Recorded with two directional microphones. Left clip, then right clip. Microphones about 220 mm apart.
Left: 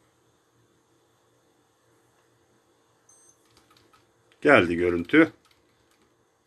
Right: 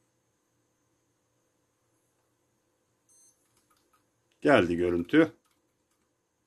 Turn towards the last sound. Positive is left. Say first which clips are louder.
# left 4 dB
turn(degrees=-20)  # may be behind; listen again after turning